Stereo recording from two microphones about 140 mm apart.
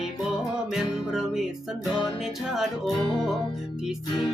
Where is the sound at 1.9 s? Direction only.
30° left (ahead or behind).